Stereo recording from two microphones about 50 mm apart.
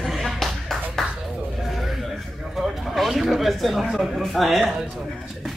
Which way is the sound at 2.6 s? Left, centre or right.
Centre.